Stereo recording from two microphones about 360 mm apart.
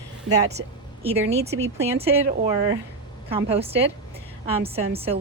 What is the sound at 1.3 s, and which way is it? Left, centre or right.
Speech, right.